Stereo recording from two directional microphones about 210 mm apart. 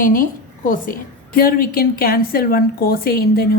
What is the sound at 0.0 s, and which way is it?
A woman's voice, 40° left (ahead or behind).